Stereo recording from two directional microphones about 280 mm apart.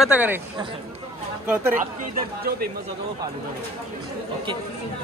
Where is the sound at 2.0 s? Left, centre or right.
Right.